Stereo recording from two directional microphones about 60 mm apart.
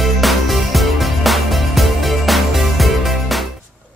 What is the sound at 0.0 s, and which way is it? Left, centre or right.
Music, centre.